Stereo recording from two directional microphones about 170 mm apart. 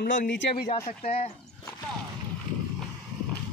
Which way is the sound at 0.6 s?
35° left (ahead or behind).